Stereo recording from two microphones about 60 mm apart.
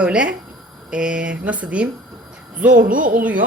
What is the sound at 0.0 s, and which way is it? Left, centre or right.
A woman's voice, centre.